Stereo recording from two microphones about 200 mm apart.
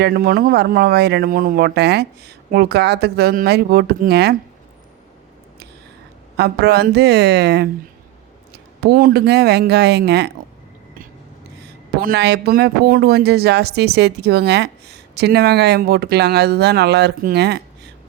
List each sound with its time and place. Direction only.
0.0 s speech: 45° right (ahead or behind)
6.3 s speech: 55° right (ahead or behind)
8.8 s speech: 50° right (ahead or behind)
11.9 s speech: 50° right (ahead or behind)